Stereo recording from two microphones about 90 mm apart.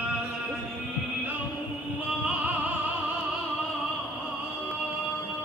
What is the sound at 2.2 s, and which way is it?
Music, 20° right (ahead or behind).